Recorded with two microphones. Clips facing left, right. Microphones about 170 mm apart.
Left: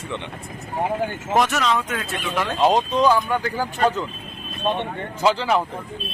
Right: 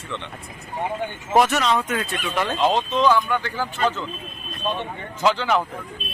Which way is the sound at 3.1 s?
40° left (ahead or behind).